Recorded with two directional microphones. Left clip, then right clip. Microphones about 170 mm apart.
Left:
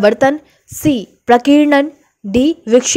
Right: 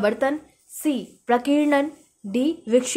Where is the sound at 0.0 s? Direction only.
45° left (ahead or behind).